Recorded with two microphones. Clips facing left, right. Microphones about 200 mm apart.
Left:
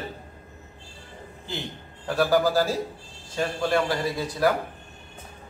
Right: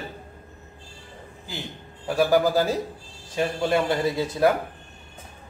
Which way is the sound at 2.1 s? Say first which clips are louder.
Right 2 dB; 15° right (ahead or behind).